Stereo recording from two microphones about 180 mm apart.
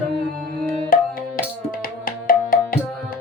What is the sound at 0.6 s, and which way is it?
Music, 50° left (ahead or behind).